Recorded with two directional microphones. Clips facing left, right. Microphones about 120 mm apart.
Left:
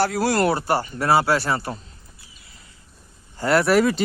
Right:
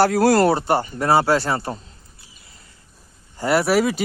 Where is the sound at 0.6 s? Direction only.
25° right (ahead or behind).